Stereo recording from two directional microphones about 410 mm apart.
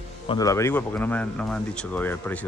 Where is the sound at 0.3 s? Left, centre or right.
Centre.